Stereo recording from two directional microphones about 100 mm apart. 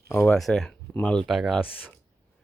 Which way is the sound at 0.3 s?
Centre (ahead or behind).